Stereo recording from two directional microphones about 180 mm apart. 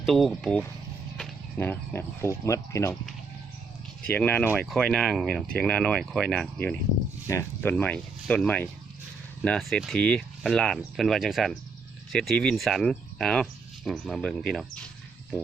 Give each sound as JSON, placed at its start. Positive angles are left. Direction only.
{"t": 0.0, "sound": "speech", "side_deg": 0}
{"t": 4.0, "sound": "speech", "side_deg": 10}